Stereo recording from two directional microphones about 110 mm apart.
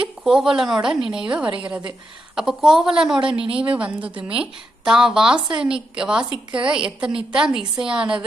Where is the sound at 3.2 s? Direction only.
50° right (ahead or behind).